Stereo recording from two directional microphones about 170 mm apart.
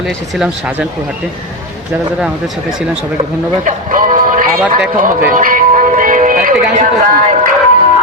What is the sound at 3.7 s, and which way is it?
Music, 50° right (ahead or behind).